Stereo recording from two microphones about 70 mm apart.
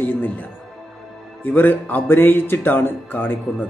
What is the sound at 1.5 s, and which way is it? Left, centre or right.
Speech, left.